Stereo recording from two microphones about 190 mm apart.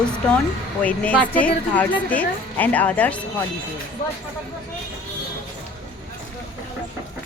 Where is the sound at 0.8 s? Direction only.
5° left (ahead or behind).